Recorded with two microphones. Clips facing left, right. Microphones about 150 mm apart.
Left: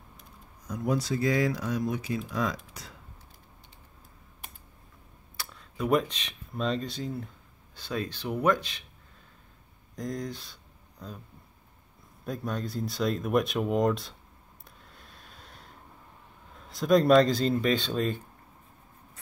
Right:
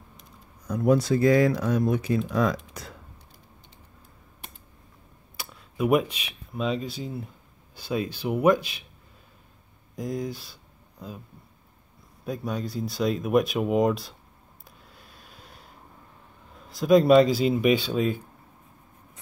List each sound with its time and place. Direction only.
0.7 s speech: 60° right (ahead or behind)
5.4 s speech: 10° right (ahead or behind)
9.9 s speech: 5° right (ahead or behind)
12.3 s speech: centre (ahead or behind)
14.9 s a sound: 5° right (ahead or behind)
16.7 s speech: centre (ahead or behind)